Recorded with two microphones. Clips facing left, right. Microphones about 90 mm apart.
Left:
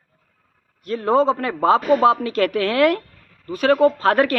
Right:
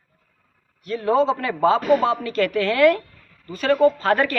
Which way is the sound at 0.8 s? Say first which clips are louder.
Left 2 dB; 45° left (ahead or behind).